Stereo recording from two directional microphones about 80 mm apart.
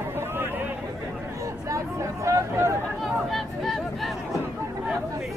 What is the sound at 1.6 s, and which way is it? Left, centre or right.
Chatter, right.